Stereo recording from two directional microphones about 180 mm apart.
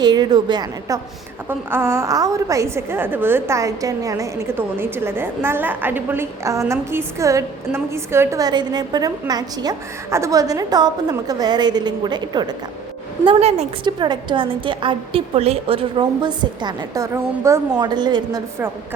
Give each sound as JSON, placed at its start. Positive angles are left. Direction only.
{"t": 0.0, "sound": "a woman's voice", "side_deg": -20}